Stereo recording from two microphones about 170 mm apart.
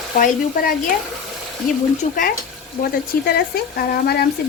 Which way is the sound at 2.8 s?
65° left (ahead or behind).